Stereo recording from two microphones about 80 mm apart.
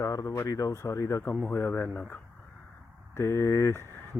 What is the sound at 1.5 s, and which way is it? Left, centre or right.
Speech, left.